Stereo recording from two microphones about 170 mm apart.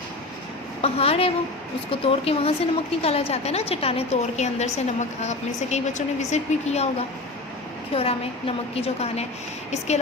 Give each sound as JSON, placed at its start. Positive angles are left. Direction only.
{"t": 0.8, "sound": "a woman's voice", "side_deg": 35}
{"t": 7.9, "sound": "a woman's voice", "side_deg": 35}